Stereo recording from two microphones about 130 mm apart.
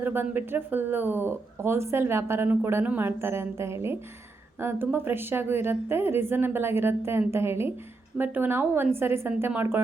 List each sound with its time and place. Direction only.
0.0 s a woman's voice: 15° right (ahead or behind)